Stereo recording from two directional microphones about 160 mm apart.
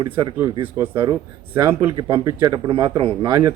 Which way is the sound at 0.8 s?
15° right (ahead or behind).